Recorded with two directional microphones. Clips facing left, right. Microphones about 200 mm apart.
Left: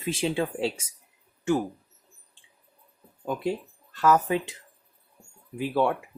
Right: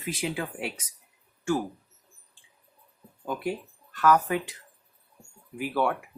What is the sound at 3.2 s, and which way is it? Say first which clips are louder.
Speech: left 2 dB; 20° left (ahead or behind).